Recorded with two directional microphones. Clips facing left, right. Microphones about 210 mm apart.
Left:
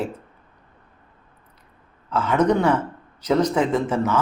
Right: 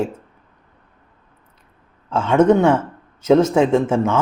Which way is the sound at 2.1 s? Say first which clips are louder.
Right 5 dB; 25° right (ahead or behind).